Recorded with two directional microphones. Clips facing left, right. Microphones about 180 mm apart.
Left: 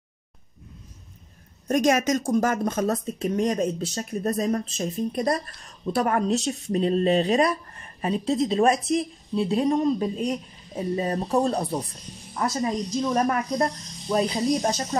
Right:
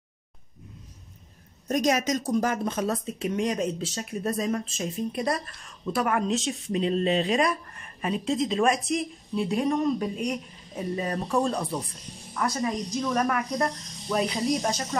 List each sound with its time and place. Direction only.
1.7 s speech: 50° left (ahead or behind); by 14.7 s 30° left (ahead or behind)